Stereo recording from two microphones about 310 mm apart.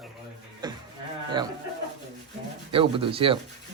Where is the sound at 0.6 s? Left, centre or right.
Centre.